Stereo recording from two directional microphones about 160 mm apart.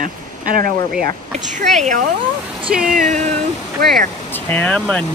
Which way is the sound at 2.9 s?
60° right (ahead or behind).